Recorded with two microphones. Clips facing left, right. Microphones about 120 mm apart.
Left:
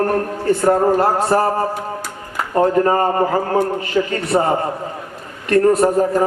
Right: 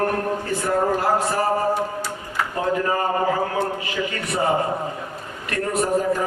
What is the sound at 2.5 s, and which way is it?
A man's voice, 45° left (ahead or behind).